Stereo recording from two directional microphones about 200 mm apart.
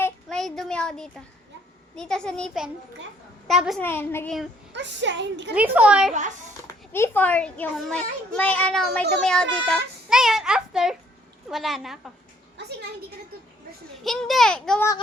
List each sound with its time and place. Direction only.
0.0 s a sound: 5° left (ahead or behind)
2.0 s a child's voice: 5° left (ahead or behind)
3.8 s a child's voice: 10° left (ahead or behind)
4.7 s a woman's voice: 65° right (ahead or behind)
5.5 s speech: 5° right (ahead or behind)
6.1 s a child's voice: 40° right (ahead or behind)
6.9 s a child's voice: 10° left (ahead or behind)
14.0 s a child's voice: centre (ahead or behind)